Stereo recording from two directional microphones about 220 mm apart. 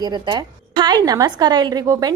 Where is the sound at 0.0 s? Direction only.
20° right (ahead or behind).